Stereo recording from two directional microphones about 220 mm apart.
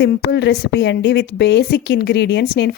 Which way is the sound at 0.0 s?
50° left (ahead or behind).